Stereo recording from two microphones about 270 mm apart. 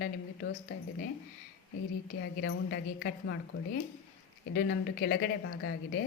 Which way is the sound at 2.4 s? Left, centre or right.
Left.